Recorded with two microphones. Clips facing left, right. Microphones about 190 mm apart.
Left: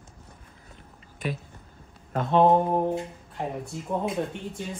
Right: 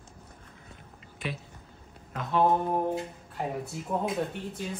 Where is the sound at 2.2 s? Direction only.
25° left (ahead or behind).